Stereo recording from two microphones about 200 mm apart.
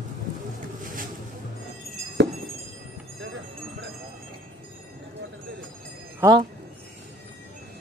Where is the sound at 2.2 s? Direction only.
60° right (ahead or behind).